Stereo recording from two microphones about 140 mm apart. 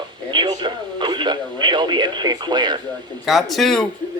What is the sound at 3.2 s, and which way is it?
Speech, centre (ahead or behind).